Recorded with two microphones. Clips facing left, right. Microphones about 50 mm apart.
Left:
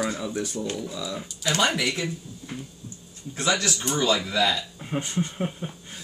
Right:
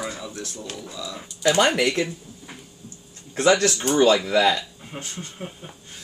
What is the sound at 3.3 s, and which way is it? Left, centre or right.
Speech, right.